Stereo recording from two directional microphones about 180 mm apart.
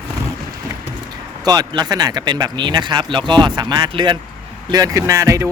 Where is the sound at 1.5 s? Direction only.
20° right (ahead or behind).